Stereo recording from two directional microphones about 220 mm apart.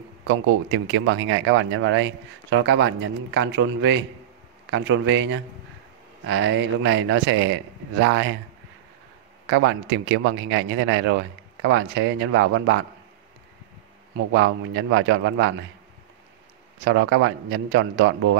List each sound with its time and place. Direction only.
0.3 s speech: 60° right (ahead or behind)
9.5 s speech: 60° right (ahead or behind)
14.3 s speech: 60° right (ahead or behind)
16.8 s speech: 60° right (ahead or behind)